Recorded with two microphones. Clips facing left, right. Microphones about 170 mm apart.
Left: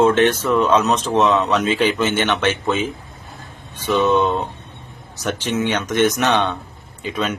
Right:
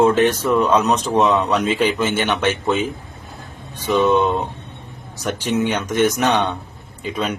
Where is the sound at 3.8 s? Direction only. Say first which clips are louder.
Right 1 dB; 15° right (ahead or behind).